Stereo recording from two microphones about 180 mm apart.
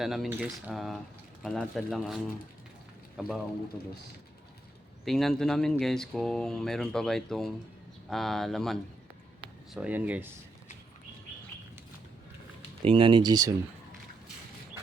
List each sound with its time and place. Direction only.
0.0 s speech: centre (ahead or behind)
5.0 s speech: centre (ahead or behind)
12.8 s speech: 30° right (ahead or behind)